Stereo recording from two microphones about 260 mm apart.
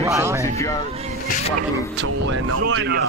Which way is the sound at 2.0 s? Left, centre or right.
Right.